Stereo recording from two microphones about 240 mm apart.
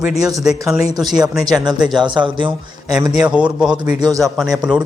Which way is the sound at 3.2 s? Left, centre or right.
Centre.